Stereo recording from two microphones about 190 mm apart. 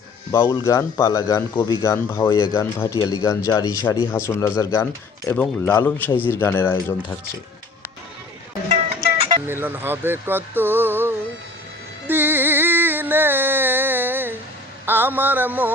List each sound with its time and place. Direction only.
0.3 s a man's voice: 20° left (ahead or behind)
9.5 s speech: 10° right (ahead or behind)
12.0 s a sound: 10° right (ahead or behind)
14.8 s speech: 10° right (ahead or behind)